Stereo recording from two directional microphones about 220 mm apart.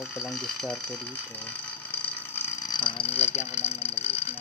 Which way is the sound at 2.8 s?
25° left (ahead or behind).